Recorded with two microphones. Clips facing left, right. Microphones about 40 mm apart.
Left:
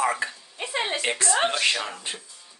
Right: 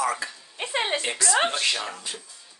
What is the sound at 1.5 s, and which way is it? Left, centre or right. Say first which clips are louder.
Speech: left 2 dB; left.